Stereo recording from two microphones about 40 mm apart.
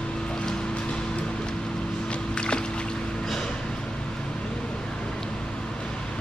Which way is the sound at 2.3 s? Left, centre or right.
Left.